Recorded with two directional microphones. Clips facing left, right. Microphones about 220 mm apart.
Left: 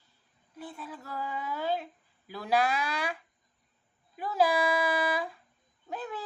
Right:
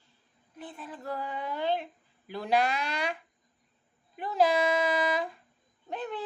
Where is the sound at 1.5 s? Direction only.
5° left (ahead or behind).